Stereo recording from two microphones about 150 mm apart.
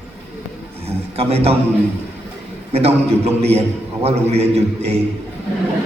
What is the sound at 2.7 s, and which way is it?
A man's voice, 45° right (ahead or behind).